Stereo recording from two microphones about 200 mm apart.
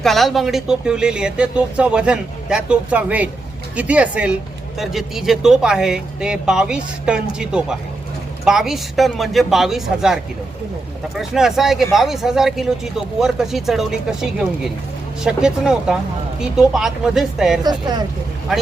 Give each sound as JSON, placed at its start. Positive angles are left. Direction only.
{"t": 0.0, "sound": "speech", "side_deg": 0}
{"t": 17.6, "sound": "speech", "side_deg": -20}
{"t": 18.5, "sound": "speech", "side_deg": 0}